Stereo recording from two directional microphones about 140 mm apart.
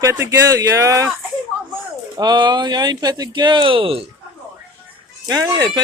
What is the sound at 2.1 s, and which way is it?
Speech, 30° right (ahead or behind).